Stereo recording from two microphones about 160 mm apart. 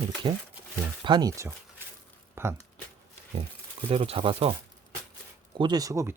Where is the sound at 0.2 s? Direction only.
30° right (ahead or behind).